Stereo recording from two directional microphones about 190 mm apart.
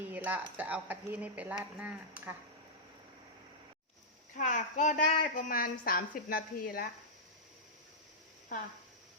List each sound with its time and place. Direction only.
0.0 s speech: 10° right (ahead or behind)
4.4 s a woman's voice: 40° left (ahead or behind)